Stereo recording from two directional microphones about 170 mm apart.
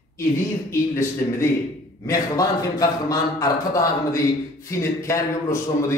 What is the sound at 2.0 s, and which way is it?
A man's voice, 20° left (ahead or behind).